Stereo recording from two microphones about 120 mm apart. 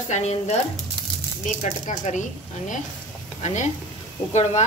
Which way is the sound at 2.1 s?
90° left.